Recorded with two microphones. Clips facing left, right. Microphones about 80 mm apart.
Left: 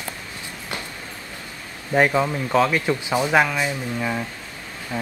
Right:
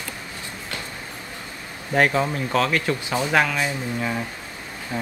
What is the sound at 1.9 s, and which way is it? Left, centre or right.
Speech, centre.